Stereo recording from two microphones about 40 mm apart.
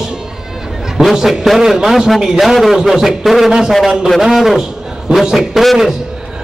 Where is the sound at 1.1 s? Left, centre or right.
Centre.